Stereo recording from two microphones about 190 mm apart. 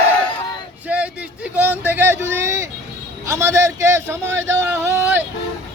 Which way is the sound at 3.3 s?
15° right (ahead or behind).